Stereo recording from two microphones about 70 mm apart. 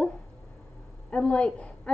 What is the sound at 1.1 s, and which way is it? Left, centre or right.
Speech, centre.